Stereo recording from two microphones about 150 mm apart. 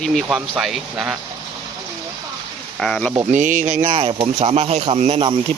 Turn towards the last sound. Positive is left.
turn(degrees=-40)  # may be behind; listen again after turning